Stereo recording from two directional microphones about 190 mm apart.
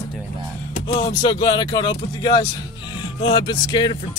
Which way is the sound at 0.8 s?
30° left (ahead or behind).